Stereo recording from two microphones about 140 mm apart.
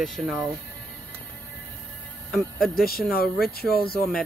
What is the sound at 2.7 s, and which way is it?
Speech, 90° left.